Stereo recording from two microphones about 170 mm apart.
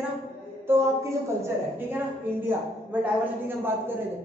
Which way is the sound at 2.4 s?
10° right (ahead or behind).